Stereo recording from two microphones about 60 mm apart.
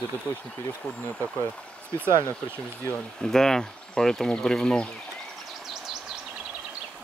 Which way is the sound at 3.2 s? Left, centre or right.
Centre.